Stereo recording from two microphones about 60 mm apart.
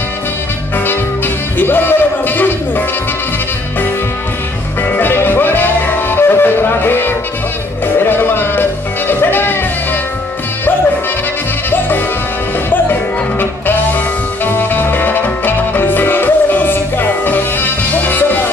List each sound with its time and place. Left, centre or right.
1.6 s a sound: left
4.8 s music: left
13.4 s music: left